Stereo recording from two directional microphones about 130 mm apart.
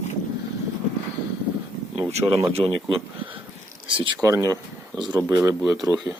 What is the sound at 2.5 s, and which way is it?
Speech, 50° right (ahead or behind).